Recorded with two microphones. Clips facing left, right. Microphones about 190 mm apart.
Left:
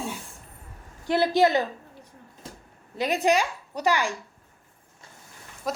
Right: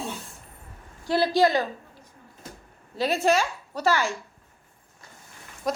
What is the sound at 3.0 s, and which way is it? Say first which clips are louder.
A woman's voice: even; 15° left (ahead or behind).